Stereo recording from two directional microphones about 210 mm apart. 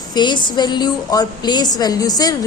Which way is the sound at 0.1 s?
20° left (ahead or behind).